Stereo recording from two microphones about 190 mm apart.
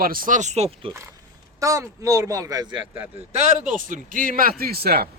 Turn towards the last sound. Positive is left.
turn(degrees=-55)  # may be behind; listen again after turning